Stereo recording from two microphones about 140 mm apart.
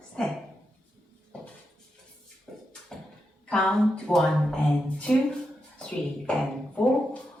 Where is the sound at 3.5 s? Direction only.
5° left (ahead or behind).